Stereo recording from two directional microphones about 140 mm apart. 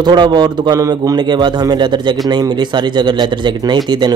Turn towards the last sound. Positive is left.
turn(degrees=-30)  # may be behind; listen again after turning